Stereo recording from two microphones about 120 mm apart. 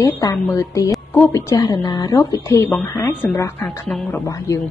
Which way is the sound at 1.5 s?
30° left (ahead or behind).